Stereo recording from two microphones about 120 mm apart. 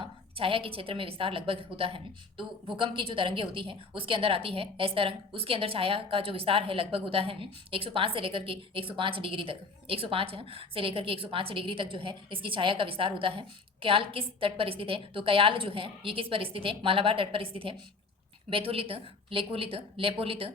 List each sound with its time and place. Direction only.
0.0 s a woman's voice: 50° right (ahead or behind)